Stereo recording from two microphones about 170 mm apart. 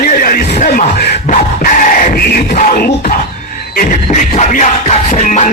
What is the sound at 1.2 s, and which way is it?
Music, 50° left (ahead or behind).